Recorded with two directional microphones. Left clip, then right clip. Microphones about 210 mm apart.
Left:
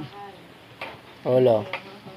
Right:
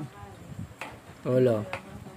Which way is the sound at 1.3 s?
35° right (ahead or behind).